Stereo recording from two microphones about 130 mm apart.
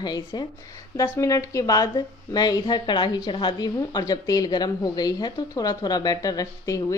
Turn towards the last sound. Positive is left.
turn(degrees=25)  # may be behind; listen again after turning